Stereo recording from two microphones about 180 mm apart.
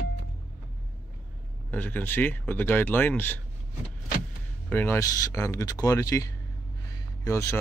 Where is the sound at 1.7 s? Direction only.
10° left (ahead or behind).